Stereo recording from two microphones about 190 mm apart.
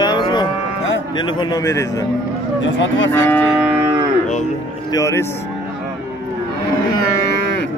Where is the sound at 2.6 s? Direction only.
75° left (ahead or behind).